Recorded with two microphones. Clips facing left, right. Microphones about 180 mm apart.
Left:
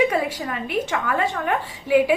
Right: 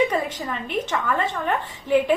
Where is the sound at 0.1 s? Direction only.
10° left (ahead or behind).